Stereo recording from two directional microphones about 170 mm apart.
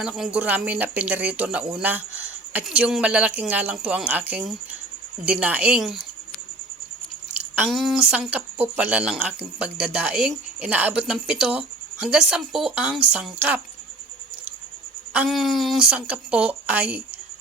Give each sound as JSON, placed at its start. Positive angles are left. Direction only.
{"t": 0.0, "sound": "speech", "side_deg": -5}
{"t": 7.3, "sound": "speech", "side_deg": -10}
{"t": 15.1, "sound": "speech", "side_deg": -5}